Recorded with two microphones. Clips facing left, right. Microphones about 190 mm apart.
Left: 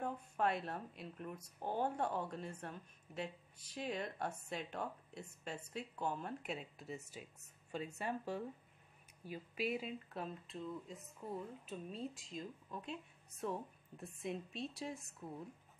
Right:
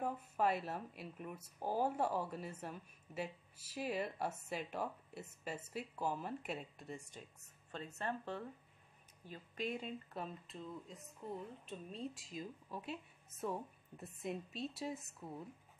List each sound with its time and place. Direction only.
0.0 s speech: 5° right (ahead or behind)